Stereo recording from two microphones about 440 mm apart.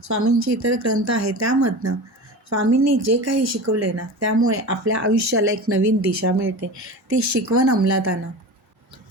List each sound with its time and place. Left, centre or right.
0.0 s speech: right